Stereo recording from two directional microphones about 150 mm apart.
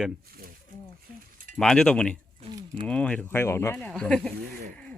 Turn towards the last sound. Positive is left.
turn(degrees=5)  # may be behind; listen again after turning